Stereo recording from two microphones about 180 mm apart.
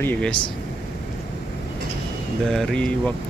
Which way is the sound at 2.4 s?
5° left (ahead or behind).